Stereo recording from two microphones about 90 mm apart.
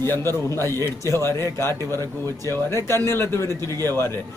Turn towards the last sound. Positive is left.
turn(degrees=30)  # may be behind; listen again after turning